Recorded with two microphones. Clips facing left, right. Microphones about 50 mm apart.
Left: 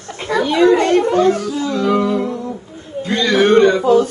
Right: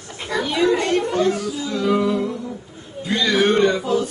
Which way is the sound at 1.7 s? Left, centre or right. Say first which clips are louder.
Left 3 dB; centre.